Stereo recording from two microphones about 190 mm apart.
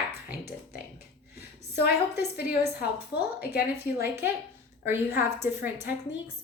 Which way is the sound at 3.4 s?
55° left (ahead or behind).